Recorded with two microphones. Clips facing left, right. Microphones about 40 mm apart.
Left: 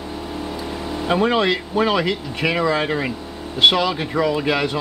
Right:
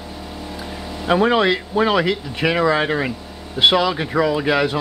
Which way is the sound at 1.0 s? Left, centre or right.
Centre.